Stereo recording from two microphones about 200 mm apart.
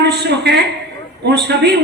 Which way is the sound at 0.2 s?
55° right (ahead or behind).